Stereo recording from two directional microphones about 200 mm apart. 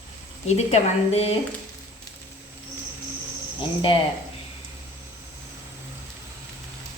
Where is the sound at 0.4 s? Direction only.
30° left (ahead or behind).